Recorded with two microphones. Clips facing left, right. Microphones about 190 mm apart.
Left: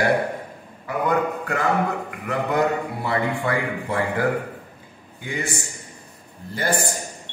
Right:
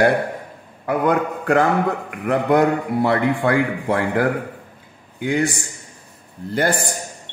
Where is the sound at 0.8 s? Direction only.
70° right (ahead or behind).